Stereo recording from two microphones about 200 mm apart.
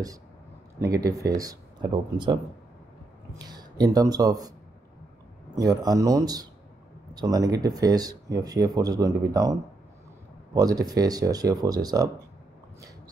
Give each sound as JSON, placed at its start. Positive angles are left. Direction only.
{"t": 0.7, "sound": "speech", "side_deg": -15}
{"t": 3.3, "sound": "speech", "side_deg": -20}